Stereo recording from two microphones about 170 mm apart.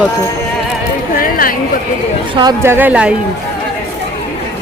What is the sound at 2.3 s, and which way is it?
Speech, 25° right (ahead or behind).